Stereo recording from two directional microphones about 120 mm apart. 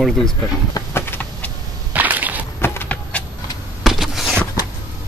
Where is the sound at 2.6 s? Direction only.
15° left (ahead or behind).